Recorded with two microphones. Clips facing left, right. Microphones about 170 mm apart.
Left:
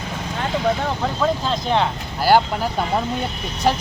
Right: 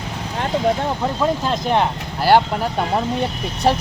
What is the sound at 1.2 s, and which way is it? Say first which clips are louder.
Speech: right 1 dB; 15° right (ahead or behind).